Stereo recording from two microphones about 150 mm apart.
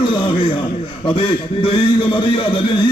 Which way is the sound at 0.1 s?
35° left (ahead or behind).